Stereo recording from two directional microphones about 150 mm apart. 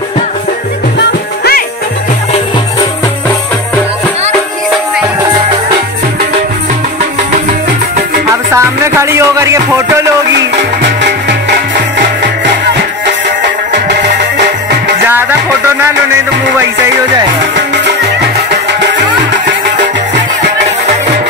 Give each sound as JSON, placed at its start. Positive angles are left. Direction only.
{"t": 8.5, "sound": "music", "side_deg": -20}
{"t": 15.0, "sound": "music", "side_deg": -15}